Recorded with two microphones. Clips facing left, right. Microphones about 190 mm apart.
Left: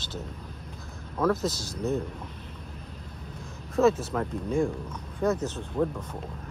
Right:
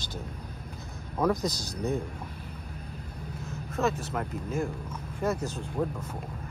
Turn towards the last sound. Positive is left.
turn(degrees=-5)  # may be behind; listen again after turning